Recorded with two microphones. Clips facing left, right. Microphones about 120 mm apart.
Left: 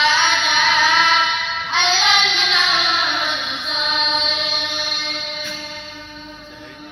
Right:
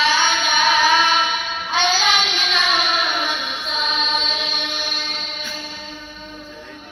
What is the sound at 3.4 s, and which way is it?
Chant, 45° right (ahead or behind).